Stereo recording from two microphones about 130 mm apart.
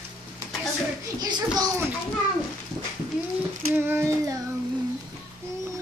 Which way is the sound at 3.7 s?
15° right (ahead or behind).